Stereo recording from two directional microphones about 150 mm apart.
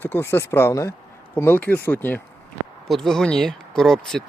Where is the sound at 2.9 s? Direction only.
Centre (ahead or behind).